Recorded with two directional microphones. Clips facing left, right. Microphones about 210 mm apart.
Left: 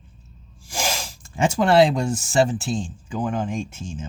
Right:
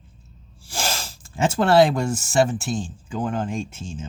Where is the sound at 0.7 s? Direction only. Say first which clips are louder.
Left 1 dB; 10° left (ahead or behind).